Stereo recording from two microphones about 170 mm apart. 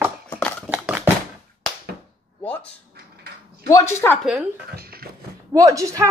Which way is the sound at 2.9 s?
65° right (ahead or behind).